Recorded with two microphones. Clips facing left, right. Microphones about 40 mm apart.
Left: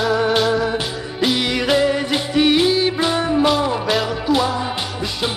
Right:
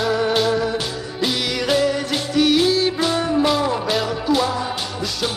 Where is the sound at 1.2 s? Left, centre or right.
Centre.